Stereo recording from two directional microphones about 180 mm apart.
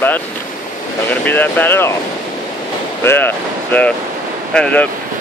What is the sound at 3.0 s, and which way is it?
Speech, 10° left (ahead or behind).